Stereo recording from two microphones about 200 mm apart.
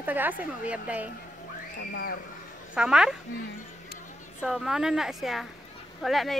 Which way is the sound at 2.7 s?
5° right (ahead or behind).